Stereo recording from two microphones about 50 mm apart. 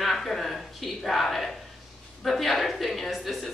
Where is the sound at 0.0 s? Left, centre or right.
Centre.